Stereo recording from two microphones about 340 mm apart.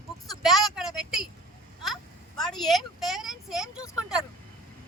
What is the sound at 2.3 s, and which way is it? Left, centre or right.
Speech, centre.